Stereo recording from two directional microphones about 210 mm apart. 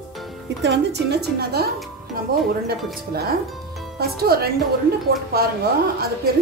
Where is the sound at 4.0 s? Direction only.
50° right (ahead or behind).